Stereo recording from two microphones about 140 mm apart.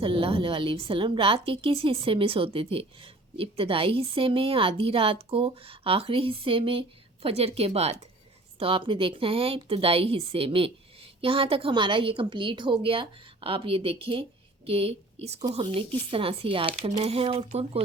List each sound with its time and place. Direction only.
0.0 s a woman's voice: 40° right (ahead or behind)
15.6 s a woman's voice: 40° right (ahead or behind)